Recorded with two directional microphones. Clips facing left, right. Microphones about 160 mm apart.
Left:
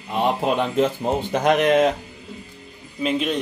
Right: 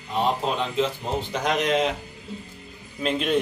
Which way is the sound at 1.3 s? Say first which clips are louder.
Left 6 dB; 55° left (ahead or behind).